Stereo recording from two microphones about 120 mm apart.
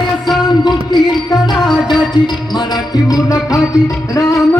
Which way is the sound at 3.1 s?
30° left (ahead or behind).